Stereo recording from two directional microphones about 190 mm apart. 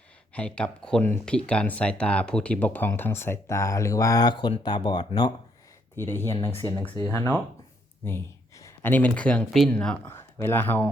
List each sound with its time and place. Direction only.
0.3 s speech: 5° left (ahead or behind)